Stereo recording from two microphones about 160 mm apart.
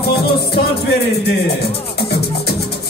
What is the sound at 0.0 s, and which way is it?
Music, 80° left.